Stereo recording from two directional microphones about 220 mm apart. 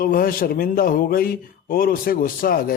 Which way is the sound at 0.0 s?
40° left (ahead or behind).